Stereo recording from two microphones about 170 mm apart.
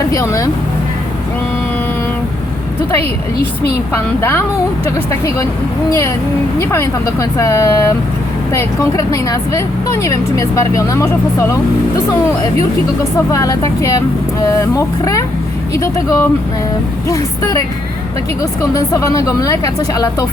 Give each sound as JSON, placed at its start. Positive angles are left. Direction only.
{"t": 0.1, "sound": "speech", "side_deg": 20}
{"t": 3.9, "sound": "speech", "side_deg": 15}
{"t": 6.6, "sound": "speech", "side_deg": 15}
{"t": 13.3, "sound": "speech", "side_deg": 20}
{"t": 18.7, "sound": "speech", "side_deg": 20}